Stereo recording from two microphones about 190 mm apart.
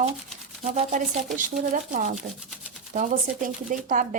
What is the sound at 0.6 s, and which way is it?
Speech, 40° right (ahead or behind).